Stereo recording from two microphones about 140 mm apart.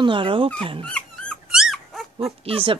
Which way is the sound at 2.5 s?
40° right (ahead or behind).